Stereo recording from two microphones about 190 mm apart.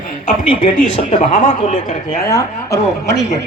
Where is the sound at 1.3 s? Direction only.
45° left (ahead or behind).